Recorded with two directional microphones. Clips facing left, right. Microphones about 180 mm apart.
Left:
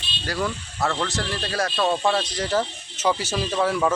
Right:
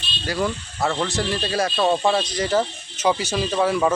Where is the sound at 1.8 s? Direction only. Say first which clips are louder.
Right 2 dB; 15° right (ahead or behind).